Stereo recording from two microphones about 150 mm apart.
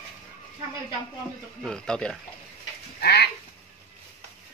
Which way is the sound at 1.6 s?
5° left (ahead or behind).